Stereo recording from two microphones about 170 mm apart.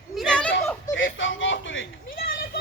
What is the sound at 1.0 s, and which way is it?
Speech, 90° left.